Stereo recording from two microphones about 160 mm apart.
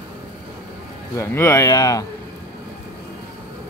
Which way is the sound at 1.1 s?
15° left (ahead or behind).